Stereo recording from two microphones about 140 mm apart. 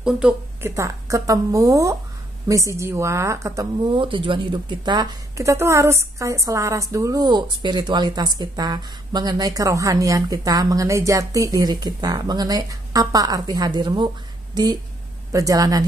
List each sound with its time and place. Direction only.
0.0 s speech: 5° right (ahead or behind)
0.6 s a woman's voice: 20° right (ahead or behind)
3.9 s a woman's voice: 40° right (ahead or behind)